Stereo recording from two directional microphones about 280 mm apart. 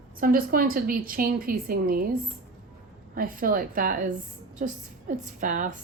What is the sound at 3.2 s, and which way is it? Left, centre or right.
A woman's voice, right.